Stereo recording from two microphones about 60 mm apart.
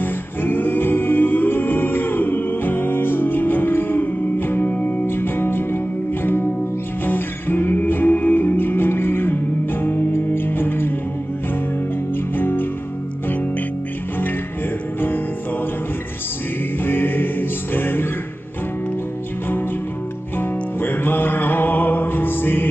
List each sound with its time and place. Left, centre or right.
0.0 s music: left
12.4 s music: left
15.0 s music: left
16.8 s music: left
20.3 s music: left